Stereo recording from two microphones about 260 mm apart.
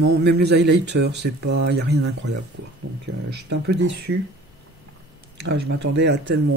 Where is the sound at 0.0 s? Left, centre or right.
Right.